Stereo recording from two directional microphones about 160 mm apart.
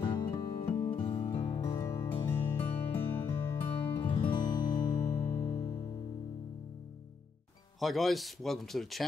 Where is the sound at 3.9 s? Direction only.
30° left (ahead or behind).